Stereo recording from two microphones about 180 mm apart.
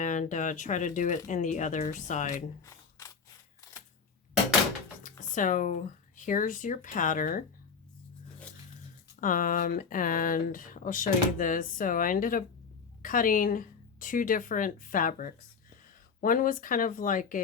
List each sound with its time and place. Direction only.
0.0 s speech: 45° left (ahead or behind)
2.6 s a sound: 20° left (ahead or behind)
5.0 s speech: 45° left (ahead or behind)
9.2 s speech: 45° left (ahead or behind)